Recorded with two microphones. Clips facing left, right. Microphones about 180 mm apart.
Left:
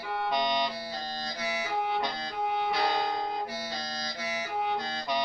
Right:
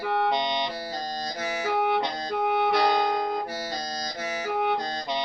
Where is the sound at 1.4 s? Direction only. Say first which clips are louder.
Right 2 dB; 45° right (ahead or behind).